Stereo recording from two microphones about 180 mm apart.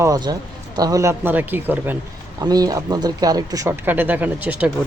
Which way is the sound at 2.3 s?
20° right (ahead or behind).